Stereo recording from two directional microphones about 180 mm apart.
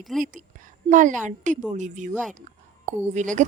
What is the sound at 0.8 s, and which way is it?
A woman's voice, 45° right (ahead or behind).